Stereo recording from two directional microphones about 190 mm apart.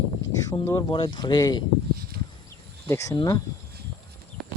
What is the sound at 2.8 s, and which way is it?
Speech, 15° left (ahead or behind).